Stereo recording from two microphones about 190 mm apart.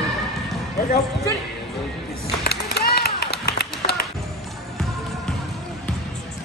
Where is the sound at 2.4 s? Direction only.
55° left (ahead or behind).